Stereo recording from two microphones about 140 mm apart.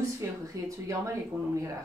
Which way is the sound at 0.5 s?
20° right (ahead or behind).